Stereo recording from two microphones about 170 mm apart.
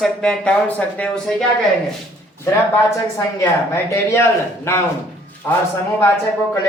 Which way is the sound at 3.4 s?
15° left (ahead or behind).